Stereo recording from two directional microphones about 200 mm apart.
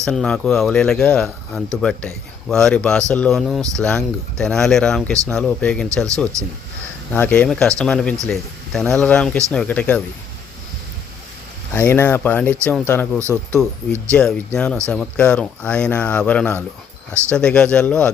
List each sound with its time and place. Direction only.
0.0 s speech: centre (ahead or behind)
6.3 s speech: 15° right (ahead or behind)
7.1 s speech: 5° left (ahead or behind)
11.7 s speech: 10° left (ahead or behind)
13.1 s speech: 15° right (ahead or behind)
14.1 s speech: 5° left (ahead or behind)